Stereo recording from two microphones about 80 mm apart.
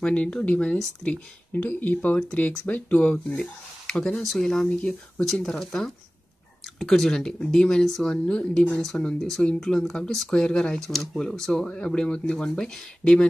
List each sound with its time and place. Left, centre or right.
0.0 s speech: centre
1.5 s speech: left